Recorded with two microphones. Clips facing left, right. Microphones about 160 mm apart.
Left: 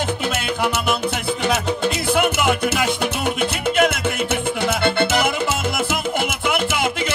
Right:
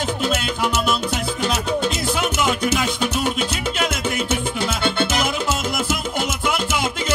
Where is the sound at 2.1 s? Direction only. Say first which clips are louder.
Left 5 dB; 55° left (ahead or behind).